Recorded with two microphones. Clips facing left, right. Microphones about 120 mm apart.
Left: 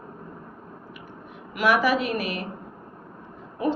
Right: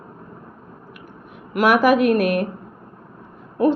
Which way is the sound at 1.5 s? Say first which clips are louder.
Right 6 dB; 50° right (ahead or behind).